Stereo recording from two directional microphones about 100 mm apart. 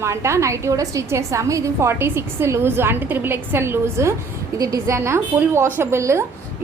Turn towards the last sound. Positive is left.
turn(degrees=-30)  # may be behind; listen again after turning